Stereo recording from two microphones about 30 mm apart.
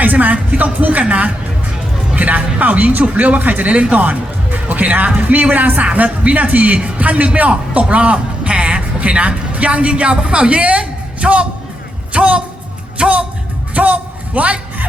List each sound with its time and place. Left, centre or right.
0.0 s speech: right
1.0 s speech: right
2.1 s speech: right
3.7 s speech: right
5.8 s speech: right
13.7 s a sound: right